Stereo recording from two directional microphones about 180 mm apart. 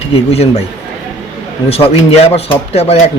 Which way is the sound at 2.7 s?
35° left (ahead or behind).